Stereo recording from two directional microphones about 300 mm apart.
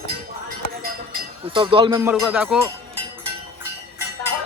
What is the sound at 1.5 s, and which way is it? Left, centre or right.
A man's voice, centre.